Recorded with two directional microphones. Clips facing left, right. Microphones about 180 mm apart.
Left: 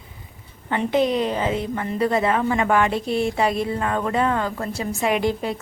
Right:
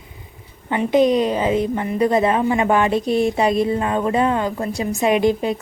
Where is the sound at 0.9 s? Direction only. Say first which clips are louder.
Right 5 dB; 15° right (ahead or behind).